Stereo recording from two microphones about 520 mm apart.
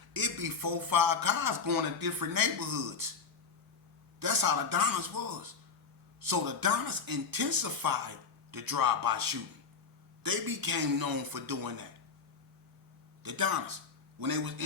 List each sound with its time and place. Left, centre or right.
0.1 s speech: right
4.2 s speech: right
13.2 s speech: right